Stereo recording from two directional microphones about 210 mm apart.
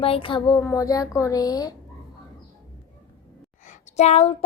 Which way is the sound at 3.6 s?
30° left (ahead or behind).